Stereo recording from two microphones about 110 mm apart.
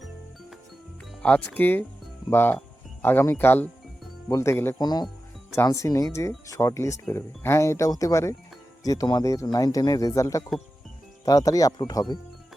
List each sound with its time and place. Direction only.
1.2 s speech: 15° left (ahead or behind)
4.8 s speech: 40° left (ahead or behind)